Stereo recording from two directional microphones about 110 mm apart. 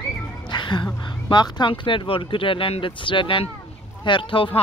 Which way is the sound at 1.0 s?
40° left (ahead or behind).